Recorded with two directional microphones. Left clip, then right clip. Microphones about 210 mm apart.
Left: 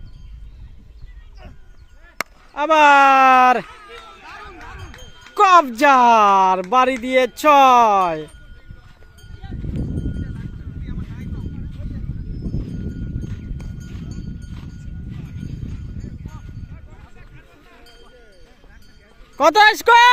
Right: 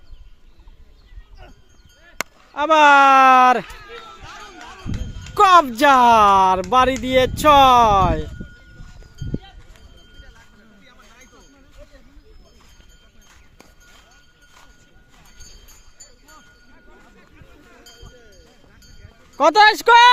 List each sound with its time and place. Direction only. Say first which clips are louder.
2.1 s speech: even; centre (ahead or behind)
3.7 s a sound: right 1 dB; 55° left (ahead or behind)
4.2 s a sound: left 1 dB; 25° right (ahead or behind)
5.3 s speech: even; centre (ahead or behind)
13.2 s clip-clop: left 11 dB; 5° right (ahead or behind)
19.4 s speech: even; 10° left (ahead or behind)